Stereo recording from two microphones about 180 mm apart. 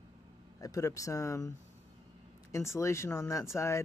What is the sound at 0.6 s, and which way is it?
Speech, 20° left (ahead or behind).